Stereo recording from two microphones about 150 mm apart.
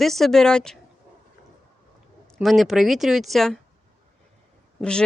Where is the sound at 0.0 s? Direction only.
Centre (ahead or behind).